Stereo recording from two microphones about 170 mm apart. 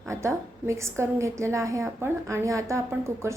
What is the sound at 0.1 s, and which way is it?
A woman's voice, 15° right (ahead or behind).